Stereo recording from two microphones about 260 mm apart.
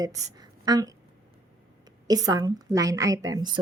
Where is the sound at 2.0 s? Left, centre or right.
Centre.